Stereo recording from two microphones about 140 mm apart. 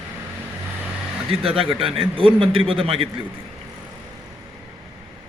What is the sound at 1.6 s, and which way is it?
A man's voice, 40° right (ahead or behind).